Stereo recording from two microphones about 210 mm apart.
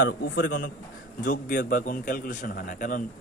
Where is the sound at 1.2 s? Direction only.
40° left (ahead or behind).